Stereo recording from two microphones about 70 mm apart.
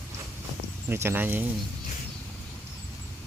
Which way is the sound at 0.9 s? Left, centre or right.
Right.